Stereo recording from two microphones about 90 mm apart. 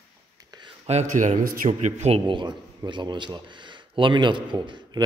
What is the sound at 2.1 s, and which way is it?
A man's voice, 65° right (ahead or behind).